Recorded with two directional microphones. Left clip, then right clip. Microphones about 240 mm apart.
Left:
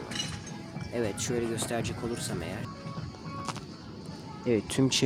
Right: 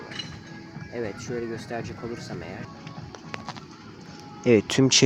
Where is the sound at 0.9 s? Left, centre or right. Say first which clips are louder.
Left 1 dB; centre.